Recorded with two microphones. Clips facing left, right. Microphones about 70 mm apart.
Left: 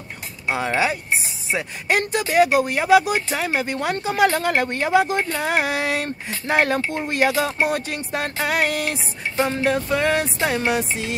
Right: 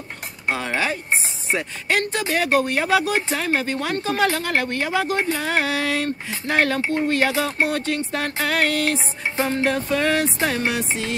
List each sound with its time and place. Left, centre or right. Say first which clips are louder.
0.5 s speech: left 2 dB; centre